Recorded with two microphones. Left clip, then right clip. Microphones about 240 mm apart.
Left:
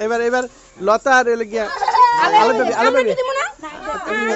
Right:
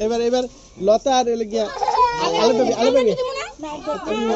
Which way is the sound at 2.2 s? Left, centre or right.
Left.